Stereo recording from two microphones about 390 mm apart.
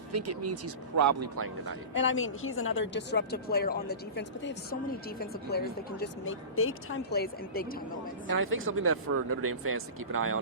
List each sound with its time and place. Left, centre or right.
0.1 s speech: right
1.9 s a woman's voice: left
8.3 s speech: right